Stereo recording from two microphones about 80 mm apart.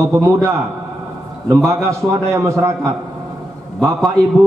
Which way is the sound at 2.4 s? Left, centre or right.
Right.